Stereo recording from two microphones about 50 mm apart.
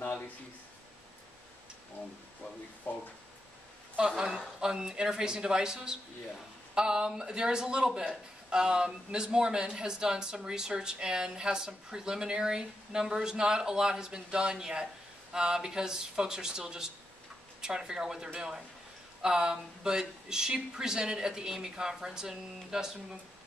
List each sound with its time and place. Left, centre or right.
2.9 s speech: left
4.6 s a man's voice: centre